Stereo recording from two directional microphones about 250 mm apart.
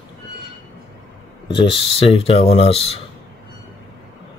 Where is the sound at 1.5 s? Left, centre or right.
Centre.